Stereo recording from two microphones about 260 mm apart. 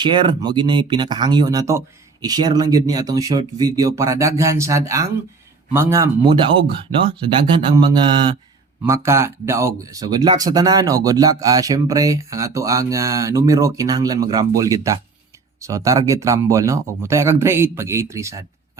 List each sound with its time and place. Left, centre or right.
0.0 s speech: centre